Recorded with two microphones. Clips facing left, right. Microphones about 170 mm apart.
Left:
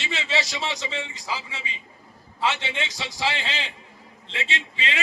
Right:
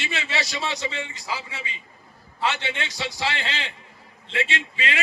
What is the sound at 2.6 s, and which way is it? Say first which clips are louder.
Speech: right 1 dB; 20° left (ahead or behind).